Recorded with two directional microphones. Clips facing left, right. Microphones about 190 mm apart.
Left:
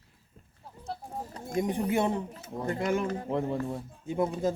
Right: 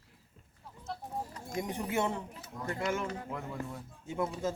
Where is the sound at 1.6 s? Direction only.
20° left (ahead or behind).